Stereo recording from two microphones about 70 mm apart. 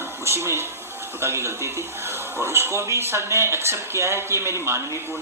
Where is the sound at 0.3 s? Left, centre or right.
Right.